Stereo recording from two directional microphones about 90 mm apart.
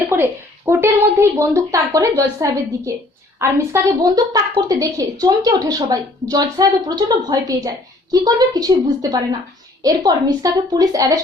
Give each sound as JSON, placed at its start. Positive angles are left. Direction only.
{"t": 0.1, "sound": "a woman's voice", "side_deg": -25}
{"t": 4.0, "sound": "a woman's voice", "side_deg": -45}